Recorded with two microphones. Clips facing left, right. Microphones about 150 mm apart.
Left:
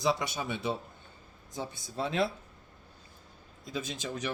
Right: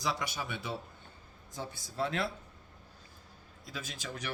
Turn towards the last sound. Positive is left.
turn(degrees=20)  # may be behind; listen again after turning